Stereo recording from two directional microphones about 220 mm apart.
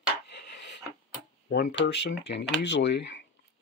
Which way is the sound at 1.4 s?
45° left (ahead or behind).